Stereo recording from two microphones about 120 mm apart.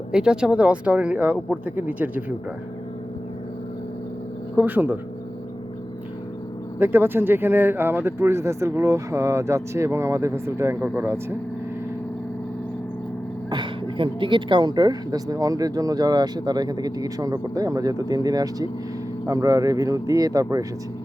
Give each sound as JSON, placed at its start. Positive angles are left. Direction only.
{"t": 0.1, "sound": "speech", "side_deg": -5}
{"t": 4.5, "sound": "speech", "side_deg": -15}
{"t": 6.7, "sound": "speech", "side_deg": -20}
{"t": 13.5, "sound": "speech", "side_deg": -45}